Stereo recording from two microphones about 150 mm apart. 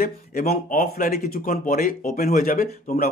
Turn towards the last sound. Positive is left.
turn(degrees=70)  # may be behind; listen again after turning